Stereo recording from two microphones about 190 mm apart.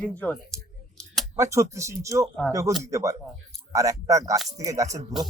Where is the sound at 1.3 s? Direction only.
15° right (ahead or behind).